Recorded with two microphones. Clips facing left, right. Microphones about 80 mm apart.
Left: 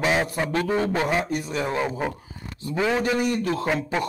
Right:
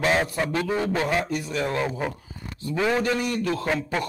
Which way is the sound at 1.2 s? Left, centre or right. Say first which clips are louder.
Left 1 dB; left.